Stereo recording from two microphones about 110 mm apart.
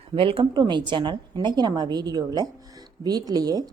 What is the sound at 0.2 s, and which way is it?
Speech, 55° right (ahead or behind).